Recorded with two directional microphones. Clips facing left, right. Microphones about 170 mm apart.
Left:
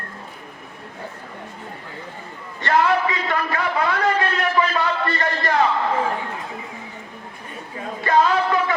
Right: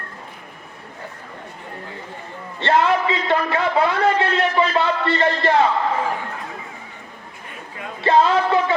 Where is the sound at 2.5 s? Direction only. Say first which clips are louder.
Right 1 dB; 25° right (ahead or behind).